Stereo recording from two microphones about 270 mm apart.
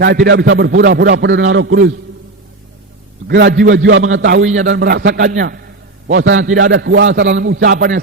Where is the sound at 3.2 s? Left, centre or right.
Right.